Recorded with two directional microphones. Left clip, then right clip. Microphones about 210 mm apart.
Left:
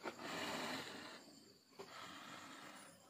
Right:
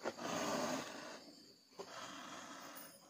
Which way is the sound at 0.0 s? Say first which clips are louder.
Right 5 dB; 15° right (ahead or behind).